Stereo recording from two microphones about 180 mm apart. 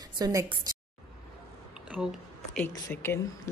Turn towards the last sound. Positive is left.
turn(degrees=10)  # may be behind; listen again after turning